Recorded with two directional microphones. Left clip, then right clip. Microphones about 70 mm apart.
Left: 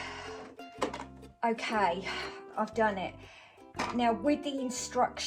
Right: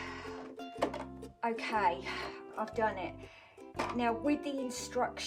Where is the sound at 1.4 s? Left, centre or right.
Centre.